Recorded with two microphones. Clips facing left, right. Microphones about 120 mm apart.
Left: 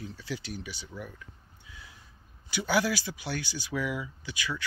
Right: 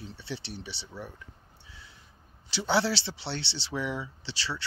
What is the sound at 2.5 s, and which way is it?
Speech, 30° right (ahead or behind).